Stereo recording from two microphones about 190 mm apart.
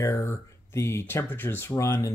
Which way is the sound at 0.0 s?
15° left (ahead or behind).